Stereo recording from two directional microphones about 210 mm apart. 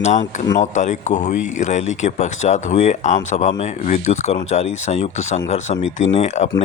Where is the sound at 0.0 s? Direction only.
35° left (ahead or behind).